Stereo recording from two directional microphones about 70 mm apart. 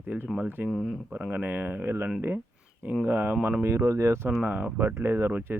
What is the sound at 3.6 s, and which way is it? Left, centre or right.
Speech, right.